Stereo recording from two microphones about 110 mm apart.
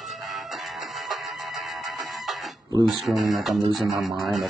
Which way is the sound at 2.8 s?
Centre (ahead or behind).